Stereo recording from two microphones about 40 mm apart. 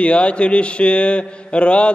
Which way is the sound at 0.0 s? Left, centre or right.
Left.